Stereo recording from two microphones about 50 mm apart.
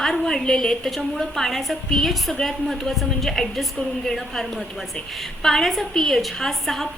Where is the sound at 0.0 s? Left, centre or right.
Centre.